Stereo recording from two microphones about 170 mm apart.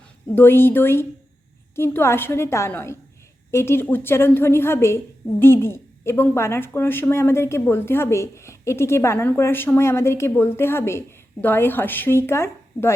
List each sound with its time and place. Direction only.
0.3 s a woman's voice: 15° left (ahead or behind)